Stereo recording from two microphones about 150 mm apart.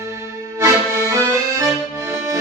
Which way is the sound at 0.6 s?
20° right (ahead or behind).